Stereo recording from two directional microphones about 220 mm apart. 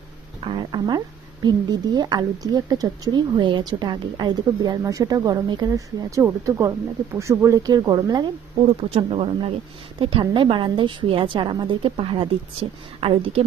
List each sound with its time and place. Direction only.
0.4 s a woman's voice: 20° right (ahead or behind)